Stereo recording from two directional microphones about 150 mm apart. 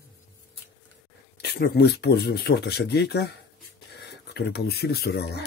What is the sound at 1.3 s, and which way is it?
Speech, 90° left.